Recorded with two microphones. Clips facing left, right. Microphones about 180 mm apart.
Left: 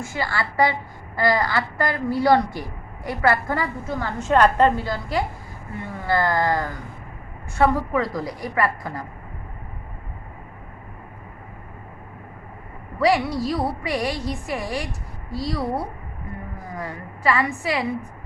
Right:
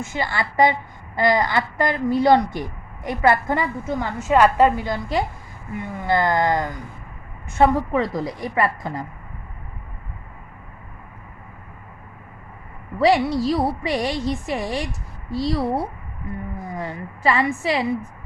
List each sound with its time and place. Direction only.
0.0 s a woman's voice: 20° right (ahead or behind)
4.2 s a woman's voice: 5° right (ahead or behind)
4.9 s a woman's voice: 20° right (ahead or behind)
13.0 s a woman's voice: 25° right (ahead or behind)